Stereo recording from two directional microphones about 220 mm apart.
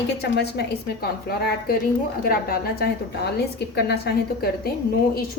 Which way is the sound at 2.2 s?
45° left (ahead or behind).